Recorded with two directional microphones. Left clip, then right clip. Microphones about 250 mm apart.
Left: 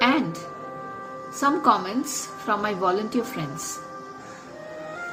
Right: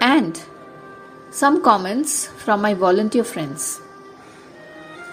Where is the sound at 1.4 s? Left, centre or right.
Right.